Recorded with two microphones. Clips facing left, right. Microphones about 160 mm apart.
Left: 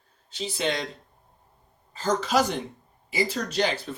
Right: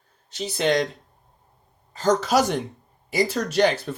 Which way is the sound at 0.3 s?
40° right (ahead or behind).